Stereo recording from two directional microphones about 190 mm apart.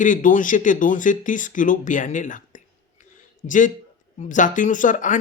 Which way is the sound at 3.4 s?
40° left (ahead or behind).